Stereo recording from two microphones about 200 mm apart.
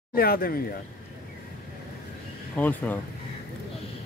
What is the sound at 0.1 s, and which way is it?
Speech, 50° left (ahead or behind).